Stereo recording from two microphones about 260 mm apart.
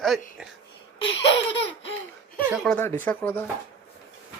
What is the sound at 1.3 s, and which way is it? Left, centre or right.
Laughter, left.